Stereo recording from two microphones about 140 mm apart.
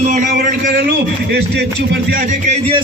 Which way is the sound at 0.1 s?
75° right (ahead or behind).